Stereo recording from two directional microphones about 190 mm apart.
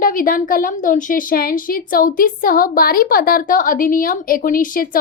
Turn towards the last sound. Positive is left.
turn(degrees=45)  # may be behind; listen again after turning